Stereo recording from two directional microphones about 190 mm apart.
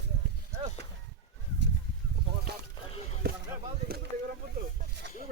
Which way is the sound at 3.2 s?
55° right (ahead or behind).